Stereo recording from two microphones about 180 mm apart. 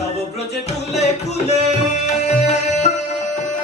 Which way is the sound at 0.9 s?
40° left (ahead or behind).